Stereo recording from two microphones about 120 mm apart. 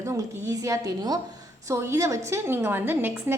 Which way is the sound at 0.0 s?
25° right (ahead or behind).